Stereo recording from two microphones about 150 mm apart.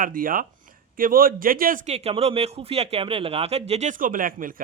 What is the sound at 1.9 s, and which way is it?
Speech, 45° right (ahead or behind).